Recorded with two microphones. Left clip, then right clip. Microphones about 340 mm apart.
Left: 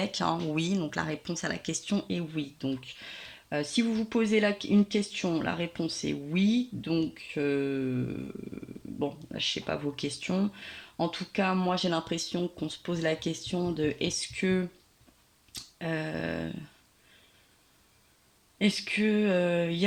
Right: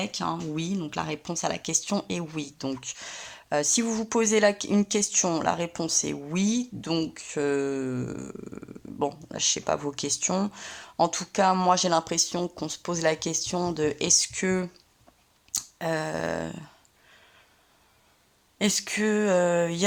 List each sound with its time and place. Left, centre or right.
0.0 s speech: centre
9.3 s speech: centre
15.5 s a sound: centre
18.6 s speech: centre